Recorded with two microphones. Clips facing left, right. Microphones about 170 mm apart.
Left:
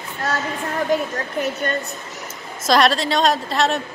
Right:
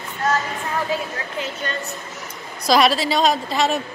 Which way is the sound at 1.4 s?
50° left (ahead or behind).